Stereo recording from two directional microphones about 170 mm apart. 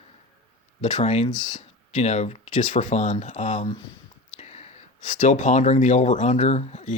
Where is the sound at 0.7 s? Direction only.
45° left (ahead or behind).